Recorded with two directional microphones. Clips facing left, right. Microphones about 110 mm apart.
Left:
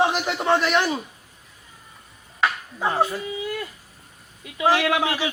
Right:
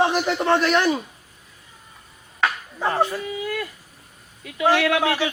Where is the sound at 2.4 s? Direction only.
10° left (ahead or behind).